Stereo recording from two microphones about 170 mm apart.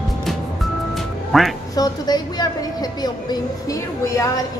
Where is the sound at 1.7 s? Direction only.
20° left (ahead or behind).